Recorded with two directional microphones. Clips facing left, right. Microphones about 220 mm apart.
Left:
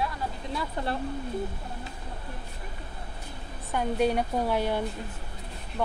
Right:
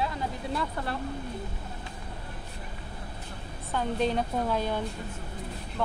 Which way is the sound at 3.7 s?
15° left (ahead or behind).